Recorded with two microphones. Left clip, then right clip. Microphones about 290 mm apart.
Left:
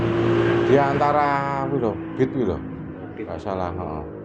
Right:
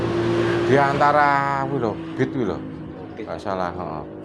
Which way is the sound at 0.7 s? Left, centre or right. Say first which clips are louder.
Right 3 dB; right.